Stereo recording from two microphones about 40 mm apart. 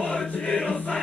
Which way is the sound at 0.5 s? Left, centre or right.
Left.